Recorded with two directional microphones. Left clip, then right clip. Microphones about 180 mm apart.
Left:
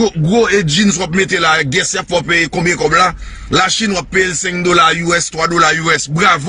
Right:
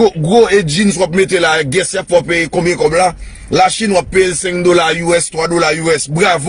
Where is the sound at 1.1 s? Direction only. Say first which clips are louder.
Left 1 dB; 10° right (ahead or behind).